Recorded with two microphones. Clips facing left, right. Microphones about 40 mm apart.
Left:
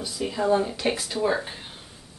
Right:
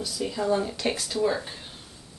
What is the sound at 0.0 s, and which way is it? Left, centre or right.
Speech, centre.